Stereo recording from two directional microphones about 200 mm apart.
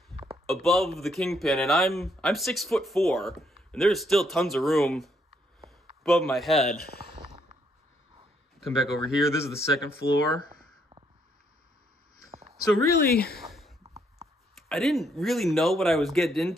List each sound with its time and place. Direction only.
0.3 s speech: centre (ahead or behind)
8.5 s speech: centre (ahead or behind)
9.2 s speech: 15° left (ahead or behind)
13.0 s speech: 50° left (ahead or behind)
13.4 s a sound: centre (ahead or behind)
14.5 s speech: centre (ahead or behind)